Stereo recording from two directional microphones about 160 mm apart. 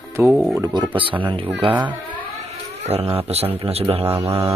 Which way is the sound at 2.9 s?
40° right (ahead or behind).